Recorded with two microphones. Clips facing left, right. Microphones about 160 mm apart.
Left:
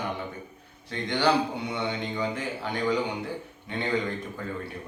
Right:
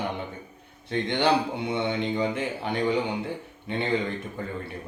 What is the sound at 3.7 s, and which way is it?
Speech, 25° right (ahead or behind).